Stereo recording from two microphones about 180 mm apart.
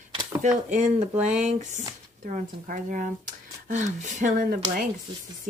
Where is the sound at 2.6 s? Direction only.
50° right (ahead or behind).